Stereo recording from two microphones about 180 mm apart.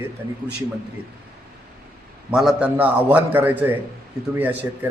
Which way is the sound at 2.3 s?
5° right (ahead or behind).